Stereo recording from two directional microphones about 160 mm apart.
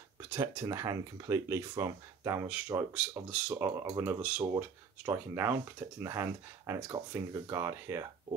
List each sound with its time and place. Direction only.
0.3 s speech: 20° right (ahead or behind)